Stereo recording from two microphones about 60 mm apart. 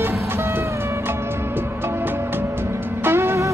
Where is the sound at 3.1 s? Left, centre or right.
Right.